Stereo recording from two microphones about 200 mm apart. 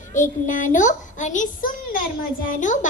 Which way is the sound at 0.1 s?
40° left (ahead or behind).